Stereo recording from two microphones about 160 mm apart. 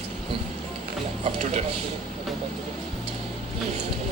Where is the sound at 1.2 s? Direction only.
45° right (ahead or behind).